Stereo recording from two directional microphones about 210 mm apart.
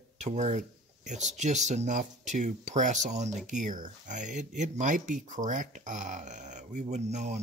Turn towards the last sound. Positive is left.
turn(degrees=-30)  # may be behind; listen again after turning